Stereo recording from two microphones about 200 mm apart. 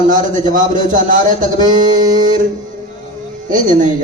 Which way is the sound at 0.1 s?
40° right (ahead or behind).